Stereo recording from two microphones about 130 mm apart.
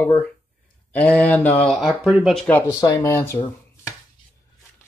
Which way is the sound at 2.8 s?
25° left (ahead or behind).